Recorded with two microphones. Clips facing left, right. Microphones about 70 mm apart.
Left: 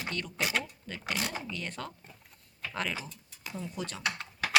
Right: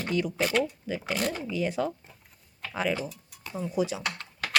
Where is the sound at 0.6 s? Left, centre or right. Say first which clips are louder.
Right 8 dB; centre.